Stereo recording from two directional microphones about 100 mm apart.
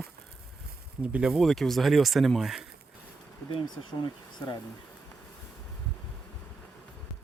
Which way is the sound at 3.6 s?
50° left (ahead or behind).